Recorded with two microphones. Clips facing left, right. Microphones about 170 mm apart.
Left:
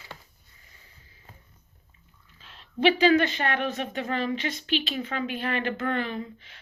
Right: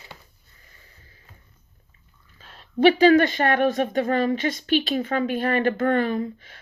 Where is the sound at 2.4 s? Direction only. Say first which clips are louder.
Right 6 dB; 45° right (ahead or behind).